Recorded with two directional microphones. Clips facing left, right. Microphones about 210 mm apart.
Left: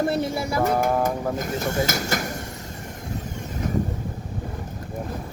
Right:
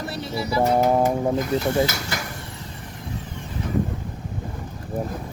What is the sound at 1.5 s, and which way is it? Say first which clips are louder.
Speech: right 3 dB; 45° left (ahead or behind).